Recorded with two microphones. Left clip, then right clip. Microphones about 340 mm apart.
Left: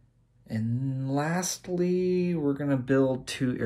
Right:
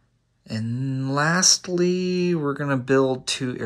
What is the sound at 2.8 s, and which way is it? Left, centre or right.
Speech, centre.